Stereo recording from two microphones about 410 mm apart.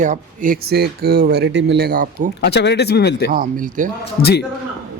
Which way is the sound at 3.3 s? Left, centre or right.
Centre.